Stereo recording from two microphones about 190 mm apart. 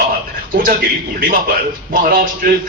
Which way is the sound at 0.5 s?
45° right (ahead or behind).